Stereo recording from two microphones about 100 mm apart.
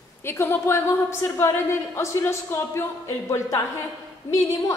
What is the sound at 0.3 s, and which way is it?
A woman's voice, 25° left (ahead or behind).